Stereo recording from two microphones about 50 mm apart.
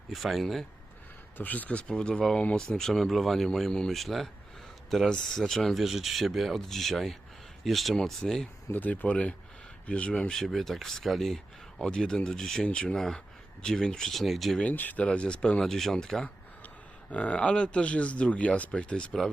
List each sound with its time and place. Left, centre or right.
0.1 s speech: centre
1.4 s speech: left; by 3.7 s centre
3.7 s speech: centre
3.9 s speech: centre
7.9 s speech: centre
8.7 s speech: left
10.3 s speech: centre
11.9 s speech: centre
12.6 s speech: centre
14.6 s speech: left
15.0 s speech: left
15.6 s speech: centre
17.1 s speech: left